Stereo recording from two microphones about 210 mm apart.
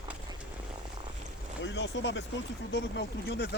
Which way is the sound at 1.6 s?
60° left (ahead or behind).